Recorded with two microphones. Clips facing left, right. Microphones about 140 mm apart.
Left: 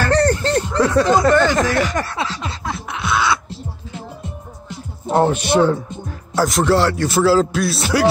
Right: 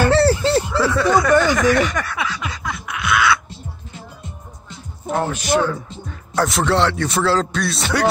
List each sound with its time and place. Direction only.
0.0 s a sound: 5° right (ahead or behind)
0.9 s speech: 20° left (ahead or behind)
1.3 s speech: 10° right (ahead or behind)
1.9 s a sound: 25° left (ahead or behind)
5.0 s music: 30° left (ahead or behind)
6.0 s speech: centre (ahead or behind)